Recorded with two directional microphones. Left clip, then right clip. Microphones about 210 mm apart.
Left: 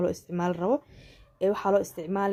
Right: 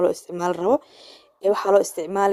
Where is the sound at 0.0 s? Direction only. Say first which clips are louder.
Right 7 dB; 35° right (ahead or behind).